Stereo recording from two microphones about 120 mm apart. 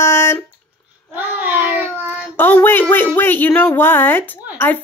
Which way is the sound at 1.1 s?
15° right (ahead or behind).